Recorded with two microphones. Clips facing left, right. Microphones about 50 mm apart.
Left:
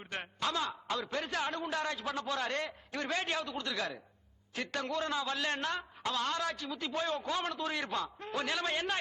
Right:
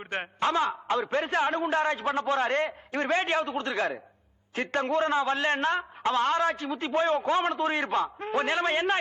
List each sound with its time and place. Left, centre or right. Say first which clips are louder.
0.0 s a man's voice: right 8 dB; right